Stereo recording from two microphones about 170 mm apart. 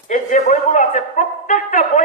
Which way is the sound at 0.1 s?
45° left (ahead or behind).